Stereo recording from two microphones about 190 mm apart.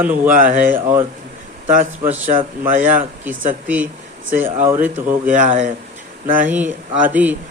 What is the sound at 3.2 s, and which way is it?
Speech, 10° right (ahead or behind).